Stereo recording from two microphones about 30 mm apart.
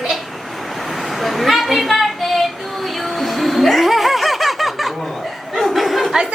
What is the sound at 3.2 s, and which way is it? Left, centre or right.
Snicker, centre.